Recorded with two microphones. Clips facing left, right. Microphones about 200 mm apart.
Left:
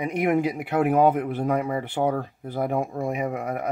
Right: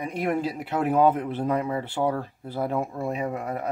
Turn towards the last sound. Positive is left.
turn(degrees=15)  # may be behind; listen again after turning